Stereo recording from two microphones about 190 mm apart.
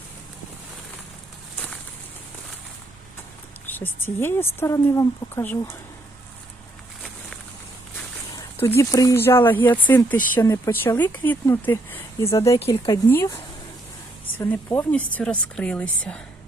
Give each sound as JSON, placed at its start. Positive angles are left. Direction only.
{"t": 3.7, "sound": "speech", "side_deg": 10}
{"t": 8.4, "sound": "speech", "side_deg": 15}
{"t": 12.5, "sound": "speech", "side_deg": 30}
{"t": 12.9, "sound": "speech", "side_deg": 15}